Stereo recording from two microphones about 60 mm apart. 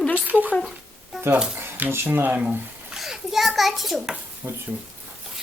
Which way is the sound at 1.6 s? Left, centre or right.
Right.